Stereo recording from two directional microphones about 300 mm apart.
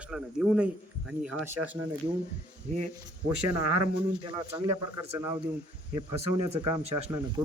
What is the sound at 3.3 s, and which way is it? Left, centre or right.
Speech, right.